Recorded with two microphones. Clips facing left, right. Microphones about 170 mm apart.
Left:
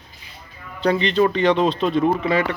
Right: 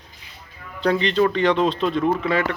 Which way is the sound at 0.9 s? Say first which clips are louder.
Left 1 dB; 5° left (ahead or behind).